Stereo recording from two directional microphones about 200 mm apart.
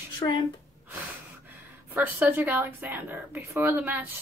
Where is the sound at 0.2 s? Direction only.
20° left (ahead or behind).